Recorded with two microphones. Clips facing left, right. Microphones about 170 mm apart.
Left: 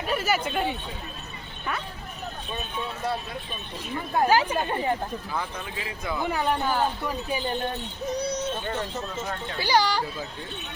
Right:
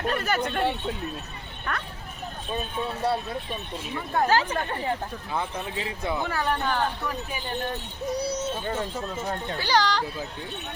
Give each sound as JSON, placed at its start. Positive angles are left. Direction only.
{"t": 0.1, "sound": "chatter", "side_deg": 5}
{"t": 1.7, "sound": "speech", "side_deg": 5}
{"t": 2.5, "sound": "speech", "side_deg": -35}
{"t": 4.1, "sound": "speech", "side_deg": 10}
{"t": 5.3, "sound": "speech", "side_deg": -25}
{"t": 6.2, "sound": "speech", "side_deg": 15}
{"t": 8.1, "sound": "speech", "side_deg": -10}
{"t": 9.6, "sound": "speech", "side_deg": 10}